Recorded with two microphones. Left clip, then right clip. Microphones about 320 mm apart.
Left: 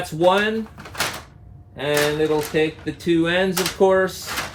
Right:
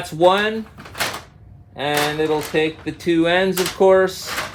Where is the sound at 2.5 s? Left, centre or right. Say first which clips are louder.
Right 1 dB; right.